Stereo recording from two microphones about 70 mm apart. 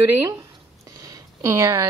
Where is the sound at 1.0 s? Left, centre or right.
Right.